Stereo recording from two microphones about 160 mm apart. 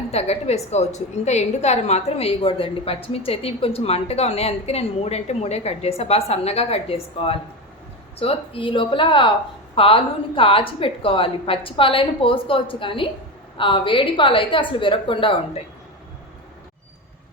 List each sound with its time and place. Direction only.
0.1 s a woman's voice: 40° left (ahead or behind)